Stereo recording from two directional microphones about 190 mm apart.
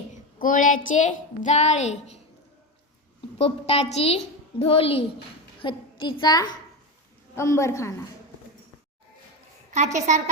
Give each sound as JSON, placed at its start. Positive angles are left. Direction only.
{"t": 0.3, "sound": "a woman's voice", "side_deg": 45}
{"t": 3.3, "sound": "a woman's voice", "side_deg": 30}
{"t": 9.7, "sound": "a woman's voice", "side_deg": -40}